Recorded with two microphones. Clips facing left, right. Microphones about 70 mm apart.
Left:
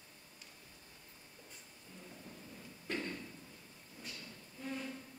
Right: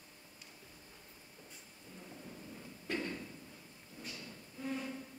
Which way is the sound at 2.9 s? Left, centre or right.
Centre.